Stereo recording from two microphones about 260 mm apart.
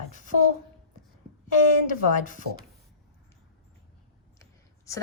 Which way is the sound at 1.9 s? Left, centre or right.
Left.